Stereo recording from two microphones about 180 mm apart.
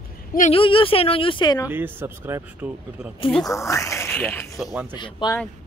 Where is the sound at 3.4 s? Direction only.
15° left (ahead or behind).